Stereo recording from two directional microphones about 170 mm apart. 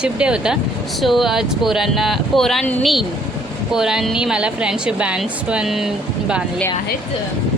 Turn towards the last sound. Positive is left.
turn(degrees=-5)  # may be behind; listen again after turning